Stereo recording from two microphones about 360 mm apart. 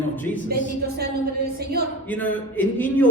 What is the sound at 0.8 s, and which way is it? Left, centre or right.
Speech, right.